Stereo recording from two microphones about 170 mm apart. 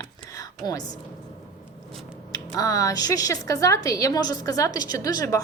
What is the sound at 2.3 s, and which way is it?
A woman's voice, 20° left (ahead or behind).